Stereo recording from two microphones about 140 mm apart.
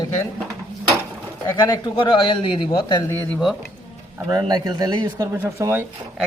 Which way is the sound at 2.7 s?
25° left (ahead or behind).